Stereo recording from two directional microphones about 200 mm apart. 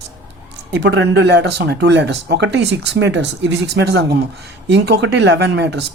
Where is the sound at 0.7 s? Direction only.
60° right (ahead or behind).